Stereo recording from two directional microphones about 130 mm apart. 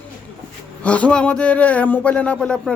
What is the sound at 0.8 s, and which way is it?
Speech, 10° left (ahead or behind).